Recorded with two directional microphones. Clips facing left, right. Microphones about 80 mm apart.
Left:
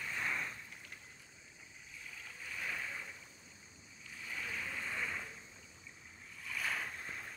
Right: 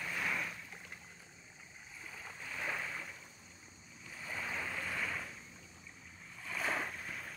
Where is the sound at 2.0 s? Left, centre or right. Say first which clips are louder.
Right 2 dB; right.